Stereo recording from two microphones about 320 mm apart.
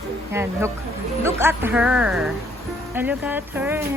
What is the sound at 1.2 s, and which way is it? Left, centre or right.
Speech, centre.